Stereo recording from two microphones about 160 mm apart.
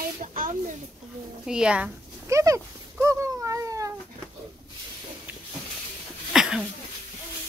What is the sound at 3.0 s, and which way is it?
Cat, 20° right (ahead or behind).